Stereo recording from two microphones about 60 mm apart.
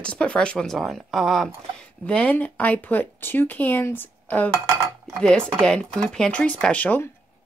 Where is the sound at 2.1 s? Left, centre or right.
Centre.